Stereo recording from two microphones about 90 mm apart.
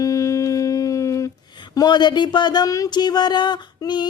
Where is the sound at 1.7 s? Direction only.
50° left (ahead or behind).